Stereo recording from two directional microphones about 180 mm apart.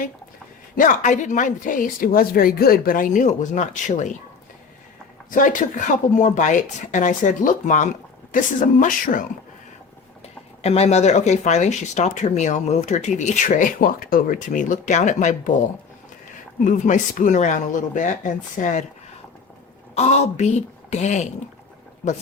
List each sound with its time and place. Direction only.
0.8 s speech: 45° left (ahead or behind)
5.3 s speech: 45° left (ahead or behind)
10.6 s speech: 35° left (ahead or behind)
16.6 s speech: 45° left (ahead or behind)
20.0 s speech: 40° left (ahead or behind)